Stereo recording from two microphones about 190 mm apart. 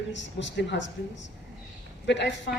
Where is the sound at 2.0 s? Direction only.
65° left (ahead or behind).